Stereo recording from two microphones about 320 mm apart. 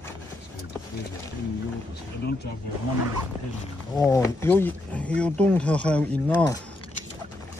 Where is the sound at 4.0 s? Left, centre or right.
Centre.